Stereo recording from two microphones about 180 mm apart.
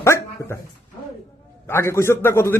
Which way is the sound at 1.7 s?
15° left (ahead or behind).